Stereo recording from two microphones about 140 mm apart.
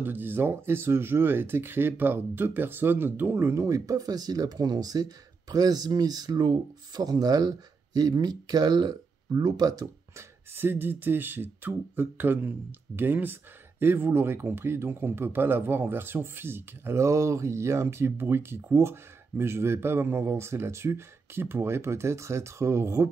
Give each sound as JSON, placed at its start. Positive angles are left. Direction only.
{"t": 0.0, "sound": "speech", "side_deg": -15}
{"t": 10.5, "sound": "speech", "side_deg": -15}